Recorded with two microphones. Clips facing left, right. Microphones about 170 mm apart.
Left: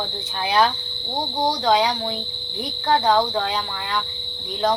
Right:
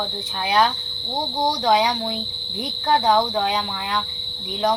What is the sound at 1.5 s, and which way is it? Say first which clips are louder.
Speech: even; 15° right (ahead or behind).